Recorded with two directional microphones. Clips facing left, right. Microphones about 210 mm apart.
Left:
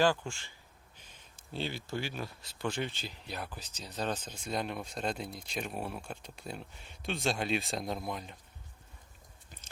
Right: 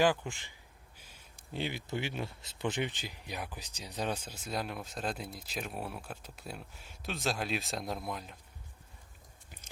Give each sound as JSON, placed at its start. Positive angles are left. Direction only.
{"t": 0.0, "sound": "speech", "side_deg": -15}